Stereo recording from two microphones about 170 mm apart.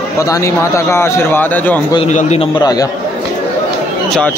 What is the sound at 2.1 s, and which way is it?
Speech, 40° left (ahead or behind).